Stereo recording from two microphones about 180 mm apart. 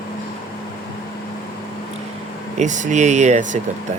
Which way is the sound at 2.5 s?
40° right (ahead or behind).